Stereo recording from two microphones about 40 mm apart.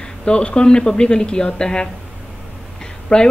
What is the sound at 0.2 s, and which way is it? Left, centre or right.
A woman's voice, left.